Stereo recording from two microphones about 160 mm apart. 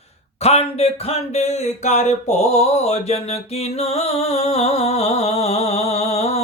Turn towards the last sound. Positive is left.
turn(degrees=40)  # may be behind; listen again after turning